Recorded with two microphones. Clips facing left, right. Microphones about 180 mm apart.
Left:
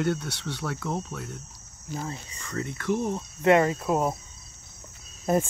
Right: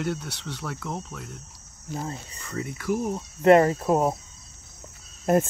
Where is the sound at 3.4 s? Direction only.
35° right (ahead or behind).